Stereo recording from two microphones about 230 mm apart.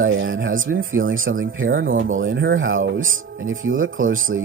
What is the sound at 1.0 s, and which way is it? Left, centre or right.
Speech, right.